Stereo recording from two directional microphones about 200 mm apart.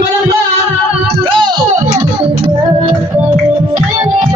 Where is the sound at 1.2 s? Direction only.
25° right (ahead or behind).